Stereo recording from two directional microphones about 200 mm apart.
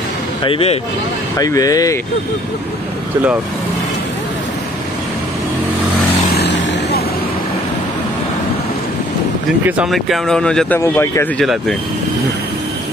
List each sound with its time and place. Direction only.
0.4 s speech: 30° left (ahead or behind)
1.4 s speech: 20° left (ahead or behind)
6.3 s vehicle: 55° left (ahead or behind)
9.7 s speech: 5° right (ahead or behind); by 11.4 s 15° left (ahead or behind)